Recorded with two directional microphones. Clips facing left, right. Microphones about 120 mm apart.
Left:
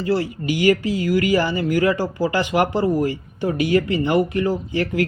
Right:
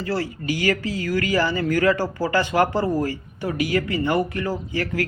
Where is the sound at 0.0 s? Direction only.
20° left (ahead or behind).